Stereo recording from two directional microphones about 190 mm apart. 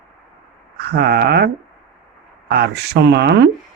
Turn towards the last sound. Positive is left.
turn(degrees=-60)  # may be behind; listen again after turning